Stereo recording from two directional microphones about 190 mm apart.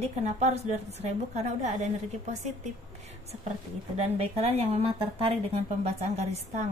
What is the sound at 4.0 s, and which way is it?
Speech, 35° right (ahead or behind).